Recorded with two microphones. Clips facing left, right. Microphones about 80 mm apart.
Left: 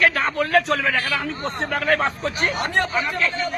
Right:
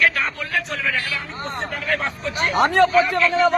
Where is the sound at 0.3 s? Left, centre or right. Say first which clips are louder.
Left 7 dB; left.